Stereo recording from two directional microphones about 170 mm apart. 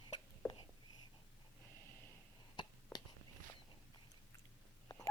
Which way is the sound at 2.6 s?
25° left (ahead or behind).